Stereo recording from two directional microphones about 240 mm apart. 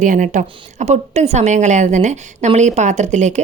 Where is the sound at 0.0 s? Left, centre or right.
Right.